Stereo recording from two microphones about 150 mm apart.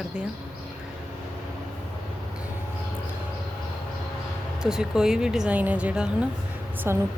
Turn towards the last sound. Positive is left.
turn(degrees=-15)  # may be behind; listen again after turning